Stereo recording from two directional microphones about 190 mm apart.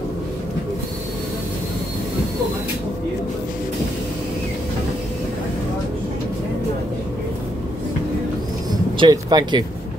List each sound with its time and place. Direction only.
8.9 s speech: 20° right (ahead or behind)